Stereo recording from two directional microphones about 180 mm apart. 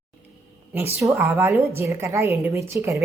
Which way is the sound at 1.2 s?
15° right (ahead or behind).